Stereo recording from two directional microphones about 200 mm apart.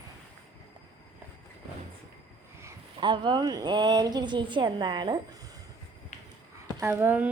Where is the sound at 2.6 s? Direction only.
25° right (ahead or behind).